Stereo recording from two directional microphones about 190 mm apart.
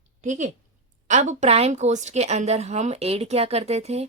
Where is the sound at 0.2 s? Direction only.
40° right (ahead or behind).